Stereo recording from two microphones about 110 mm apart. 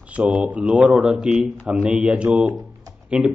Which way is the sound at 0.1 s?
15° right (ahead or behind).